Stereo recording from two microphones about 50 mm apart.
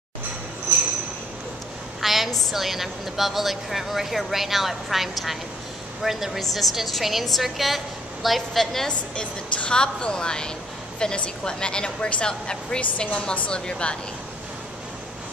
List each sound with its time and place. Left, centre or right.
2.0 s a woman's voice: centre
8.8 s a woman's voice: centre